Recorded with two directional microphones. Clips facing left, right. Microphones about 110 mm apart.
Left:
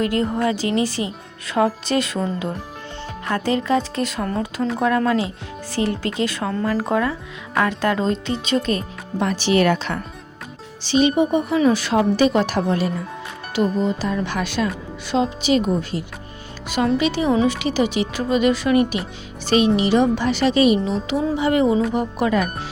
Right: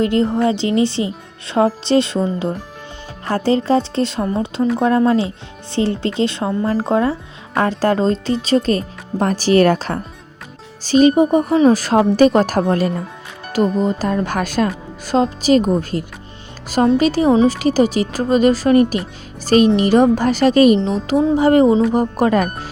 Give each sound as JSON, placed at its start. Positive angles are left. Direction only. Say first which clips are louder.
{"t": 0.0, "sound": "speech", "louder": "right 4 dB", "side_deg": -25}
{"t": 3.2, "sound": "speech", "louder": "right 5 dB", "side_deg": -30}
{"t": 4.3, "sound": "speech", "louder": "right 4 dB", "side_deg": -15}
{"t": 4.8, "sound": "speech", "louder": "right 3 dB", "side_deg": -30}